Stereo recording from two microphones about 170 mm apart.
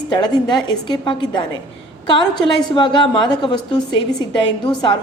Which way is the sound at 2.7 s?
25° left (ahead or behind).